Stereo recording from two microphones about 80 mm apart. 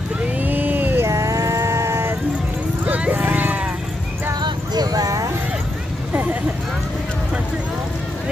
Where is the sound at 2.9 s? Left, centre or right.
Centre.